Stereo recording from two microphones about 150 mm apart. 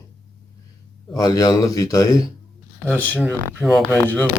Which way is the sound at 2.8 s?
10° left (ahead or behind).